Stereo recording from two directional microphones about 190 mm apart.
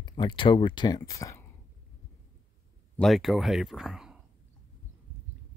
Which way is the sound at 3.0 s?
Centre (ahead or behind).